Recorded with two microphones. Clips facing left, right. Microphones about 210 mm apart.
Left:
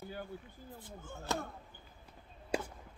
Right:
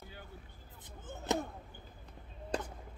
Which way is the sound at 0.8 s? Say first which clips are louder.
Right 3 dB; 20° right (ahead or behind).